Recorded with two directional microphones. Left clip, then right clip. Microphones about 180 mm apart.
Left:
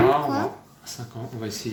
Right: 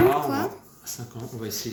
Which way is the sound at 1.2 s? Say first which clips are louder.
Left 2 dB; 5° right (ahead or behind).